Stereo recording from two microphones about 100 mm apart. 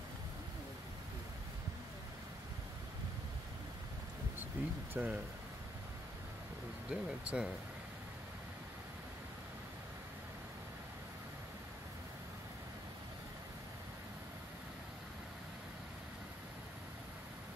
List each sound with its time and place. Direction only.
4.6 s speech: 20° right (ahead or behind)
6.9 s speech: 10° right (ahead or behind)